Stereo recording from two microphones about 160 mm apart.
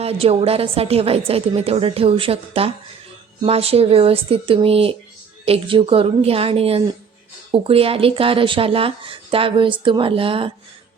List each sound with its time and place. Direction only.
0.0 s a woman's voice: 40° right (ahead or behind)